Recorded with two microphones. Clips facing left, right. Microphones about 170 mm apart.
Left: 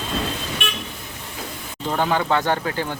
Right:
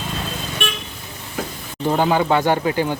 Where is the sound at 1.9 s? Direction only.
15° right (ahead or behind).